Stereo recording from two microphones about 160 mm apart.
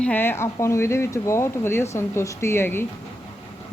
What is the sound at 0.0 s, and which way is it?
Speech, 10° left (ahead or behind).